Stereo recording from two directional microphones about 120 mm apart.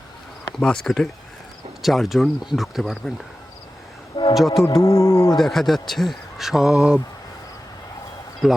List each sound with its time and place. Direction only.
0.6 s speech: 5° left (ahead or behind)
4.4 s speech: centre (ahead or behind)
4.6 s speech: 25° left (ahead or behind)
5.4 s speech: centre (ahead or behind)
8.4 s speech: 5° right (ahead or behind)